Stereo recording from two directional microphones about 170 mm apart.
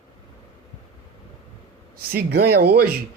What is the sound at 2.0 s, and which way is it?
Speech, 65° right (ahead or behind).